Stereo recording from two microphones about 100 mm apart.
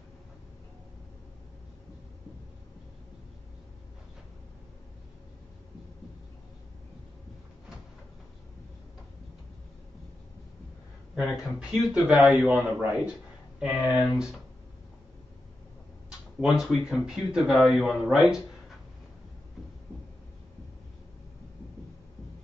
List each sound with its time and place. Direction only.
11.1 s speech: 5° right (ahead or behind)
11.9 s speech: 15° right (ahead or behind)
16.3 s speech: 5° right (ahead or behind)